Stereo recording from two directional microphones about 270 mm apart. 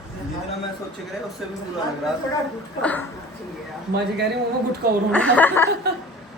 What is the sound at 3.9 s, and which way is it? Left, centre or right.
Speech, right.